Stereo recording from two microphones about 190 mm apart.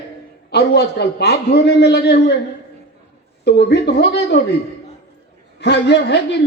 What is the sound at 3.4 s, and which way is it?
Speech, 60° left (ahead or behind).